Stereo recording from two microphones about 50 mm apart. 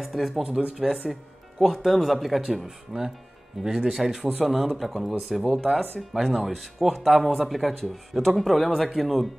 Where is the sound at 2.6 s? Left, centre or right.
Centre.